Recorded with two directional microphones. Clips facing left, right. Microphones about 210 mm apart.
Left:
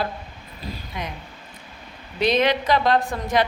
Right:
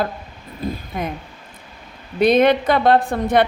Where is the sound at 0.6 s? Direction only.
50° right (ahead or behind).